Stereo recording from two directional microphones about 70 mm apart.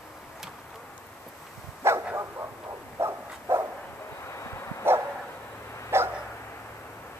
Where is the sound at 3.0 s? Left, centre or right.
Right.